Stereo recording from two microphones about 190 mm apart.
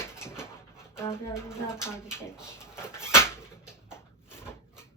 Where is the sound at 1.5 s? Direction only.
15° left (ahead or behind).